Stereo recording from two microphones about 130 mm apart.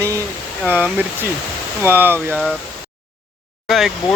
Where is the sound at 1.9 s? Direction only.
15° right (ahead or behind).